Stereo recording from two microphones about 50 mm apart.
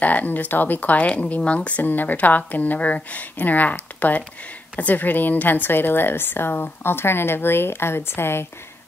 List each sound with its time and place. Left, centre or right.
0.0 s a woman's voice: left
1.8 s a woman's voice: left